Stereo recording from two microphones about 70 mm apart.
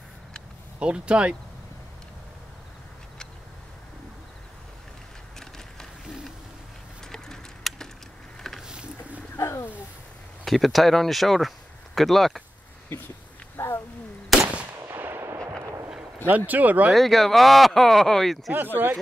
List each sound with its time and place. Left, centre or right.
0.7 s speech: centre
7.0 s a sound: centre
8.6 s a sound: centre
9.4 s a sound: left
10.4 s speech: centre
13.6 s wild animals: left
14.3 s gunshot: centre
14.8 s gunshot: right
16.3 s speech: right
16.9 s speech: centre
18.8 s speech: right